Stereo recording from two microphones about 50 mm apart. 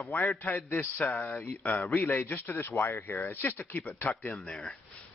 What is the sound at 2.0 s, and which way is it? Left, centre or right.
Speech, left.